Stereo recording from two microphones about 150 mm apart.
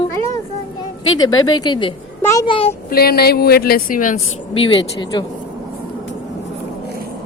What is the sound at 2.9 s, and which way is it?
A woman's voice, 90° left.